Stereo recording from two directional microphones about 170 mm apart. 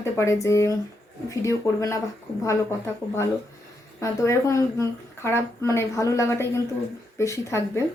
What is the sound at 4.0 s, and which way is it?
Speech, 20° left (ahead or behind).